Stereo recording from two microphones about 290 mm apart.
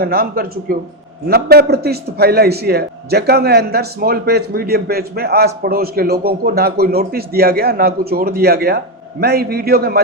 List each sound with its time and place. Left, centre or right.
0.0 s a man's voice: right